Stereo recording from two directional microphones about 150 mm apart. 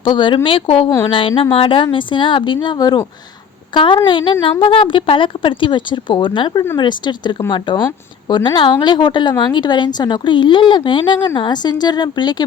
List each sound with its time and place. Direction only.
0.0 s a woman's voice: 35° left (ahead or behind)
0.9 s a woman's voice: 20° left (ahead or behind)
1.4 s a woman's voice: 35° left (ahead or behind)